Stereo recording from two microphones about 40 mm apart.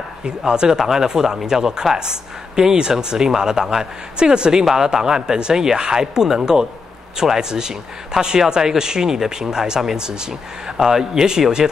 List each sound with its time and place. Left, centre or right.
0.5 s speech: centre
10.8 s speech: centre